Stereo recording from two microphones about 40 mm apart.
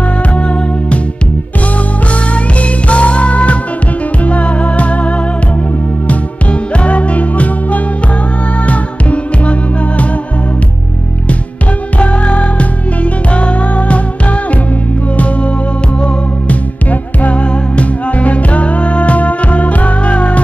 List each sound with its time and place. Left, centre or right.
0.3 s music: left
2.3 s music: left
12.0 s music: left
15.1 s music: left